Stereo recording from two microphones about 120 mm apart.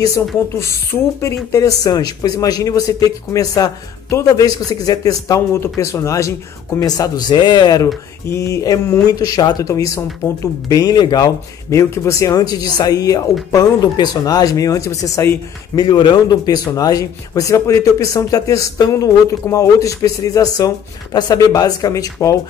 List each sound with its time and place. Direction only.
1.2 s a man's voice: 25° left (ahead or behind)